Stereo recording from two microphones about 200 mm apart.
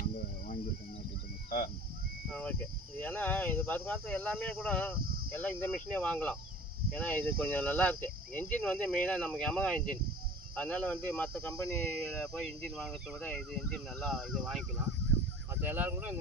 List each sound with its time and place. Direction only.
1.5 s speech: 45° left (ahead or behind)
2.3 s speech: 5° left (ahead or behind)
5.0 s a sound: 45° right (ahead or behind)
5.4 s speech: 10° left (ahead or behind)
15.6 s speech: 10° right (ahead or behind)